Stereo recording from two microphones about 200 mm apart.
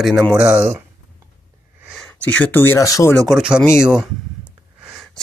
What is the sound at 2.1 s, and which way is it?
Speech, 10° left (ahead or behind).